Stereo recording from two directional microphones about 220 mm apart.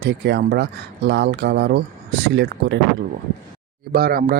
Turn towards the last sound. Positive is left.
turn(degrees=-45)  # may be behind; listen again after turning